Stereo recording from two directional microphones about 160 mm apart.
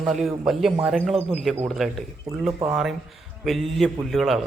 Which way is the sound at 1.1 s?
35° right (ahead or behind).